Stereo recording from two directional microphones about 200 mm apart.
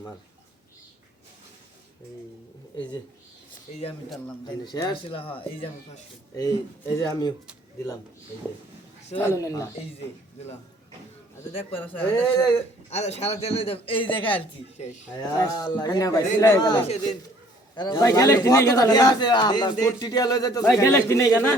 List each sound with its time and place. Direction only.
4.4 s a man's voice: 20° left (ahead or behind)
9.1 s a man's voice: 15° left (ahead or behind)
11.9 s a man's voice: 10° left (ahead or behind)
12.9 s a man's voice: 30° left (ahead or behind); by 21.5 s 15° left (ahead or behind)